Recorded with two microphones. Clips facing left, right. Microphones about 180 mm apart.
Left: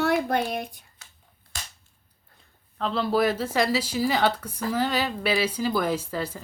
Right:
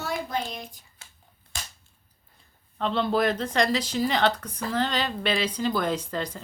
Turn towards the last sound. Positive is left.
turn(degrees=5)  # may be behind; listen again after turning